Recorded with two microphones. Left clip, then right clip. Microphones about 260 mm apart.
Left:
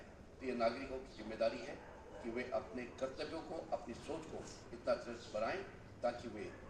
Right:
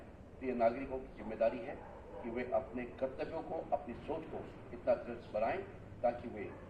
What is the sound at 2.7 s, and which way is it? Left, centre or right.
A man's voice, left.